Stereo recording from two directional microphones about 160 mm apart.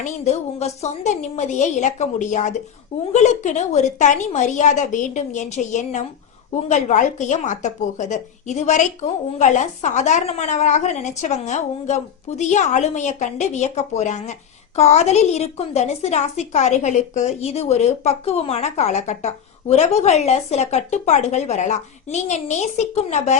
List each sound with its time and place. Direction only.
0.0 s a woman's voice: 45° left (ahead or behind)